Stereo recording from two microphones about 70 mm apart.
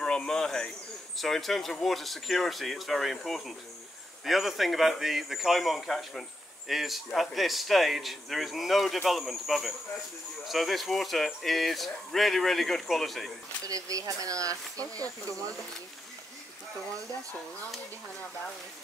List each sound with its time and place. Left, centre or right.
0.0 s a sound: centre
1.1 s a man's voice: centre
13.7 s speech: right